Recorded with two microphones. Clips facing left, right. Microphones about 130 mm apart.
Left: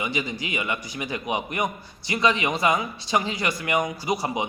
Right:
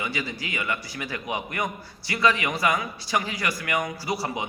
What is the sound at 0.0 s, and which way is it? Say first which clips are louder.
A man's voice: left 3 dB; 20° left (ahead or behind).